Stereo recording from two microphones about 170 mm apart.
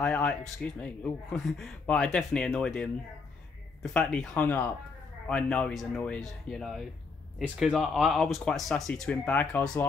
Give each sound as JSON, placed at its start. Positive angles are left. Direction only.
{"t": 0.0, "sound": "speech", "side_deg": 5}